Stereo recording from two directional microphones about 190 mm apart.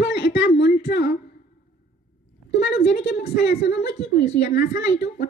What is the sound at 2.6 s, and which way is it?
A woman's voice, 60° left (ahead or behind).